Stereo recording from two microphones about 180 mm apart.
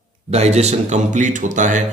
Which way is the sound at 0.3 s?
35° right (ahead or behind).